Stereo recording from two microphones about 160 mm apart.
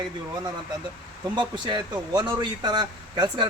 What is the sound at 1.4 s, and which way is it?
Speech, 30° right (ahead or behind).